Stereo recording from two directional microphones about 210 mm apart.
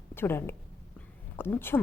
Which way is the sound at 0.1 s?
10° left (ahead or behind).